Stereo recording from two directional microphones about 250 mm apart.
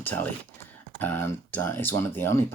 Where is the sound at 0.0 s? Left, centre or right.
Centre.